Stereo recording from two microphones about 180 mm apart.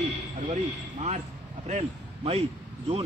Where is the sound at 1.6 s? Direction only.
40° right (ahead or behind).